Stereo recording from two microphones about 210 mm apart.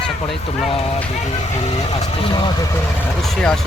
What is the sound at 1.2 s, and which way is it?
Speech, 30° left (ahead or behind).